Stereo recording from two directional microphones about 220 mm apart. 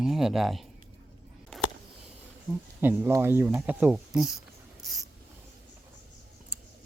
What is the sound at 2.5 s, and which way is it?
Speech, 10° right (ahead or behind).